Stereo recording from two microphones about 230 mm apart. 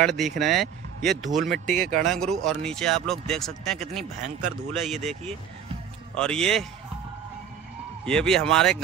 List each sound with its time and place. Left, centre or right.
0.0 s speech: centre
1.7 s speech: right
2.0 s speech: centre
6.1 s speech: centre
8.0 s speech: centre